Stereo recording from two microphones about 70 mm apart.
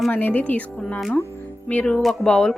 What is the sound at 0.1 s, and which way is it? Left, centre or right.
Speech, left.